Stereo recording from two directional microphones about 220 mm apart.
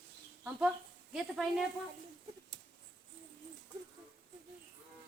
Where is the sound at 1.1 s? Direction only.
Centre (ahead or behind).